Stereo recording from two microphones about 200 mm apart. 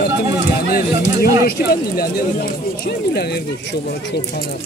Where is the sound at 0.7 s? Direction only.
50° left (ahead or behind).